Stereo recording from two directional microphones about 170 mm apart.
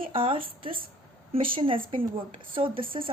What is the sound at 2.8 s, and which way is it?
Speech, 30° right (ahead or behind).